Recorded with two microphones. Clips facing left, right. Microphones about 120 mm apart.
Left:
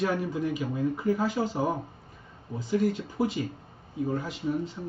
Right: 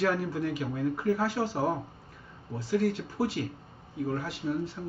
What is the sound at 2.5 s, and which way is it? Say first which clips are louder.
A man's voice: left 1 dB; centre (ahead or behind).